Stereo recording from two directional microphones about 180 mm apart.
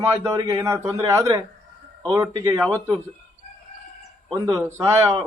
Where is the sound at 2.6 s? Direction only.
5° left (ahead or behind).